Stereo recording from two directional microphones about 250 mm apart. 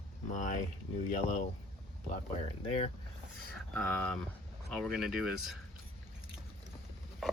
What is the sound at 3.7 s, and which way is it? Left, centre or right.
Speech, centre.